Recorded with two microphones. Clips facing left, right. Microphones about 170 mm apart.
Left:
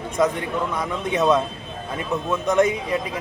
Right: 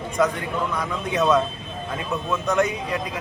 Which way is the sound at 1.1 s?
20° left (ahead or behind).